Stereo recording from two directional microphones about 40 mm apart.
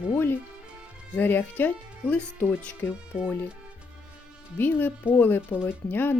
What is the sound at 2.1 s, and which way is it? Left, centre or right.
Speech, left.